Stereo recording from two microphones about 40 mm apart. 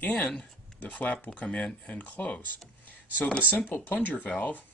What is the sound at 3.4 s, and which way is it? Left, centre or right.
Speech, left.